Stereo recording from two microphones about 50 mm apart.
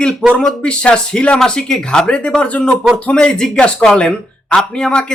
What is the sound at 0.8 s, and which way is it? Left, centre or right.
Speech, left.